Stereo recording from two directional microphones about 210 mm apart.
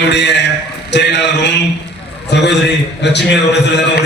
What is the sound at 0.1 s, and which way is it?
A man's voice, 55° left (ahead or behind).